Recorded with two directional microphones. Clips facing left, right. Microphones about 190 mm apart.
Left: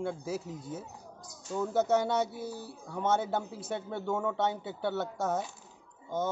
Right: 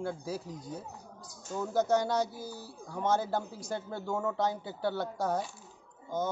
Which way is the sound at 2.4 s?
30° left (ahead or behind).